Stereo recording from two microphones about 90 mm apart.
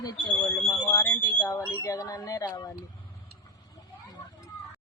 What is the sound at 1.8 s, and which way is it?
Speech, 40° left (ahead or behind).